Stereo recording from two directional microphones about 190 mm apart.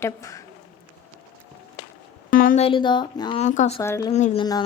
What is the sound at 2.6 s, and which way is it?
Speech, 25° left (ahead or behind).